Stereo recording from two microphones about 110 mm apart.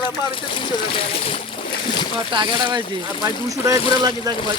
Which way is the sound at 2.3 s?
45° right (ahead or behind).